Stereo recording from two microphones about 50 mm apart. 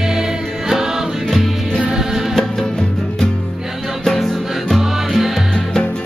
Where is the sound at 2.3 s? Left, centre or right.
Centre.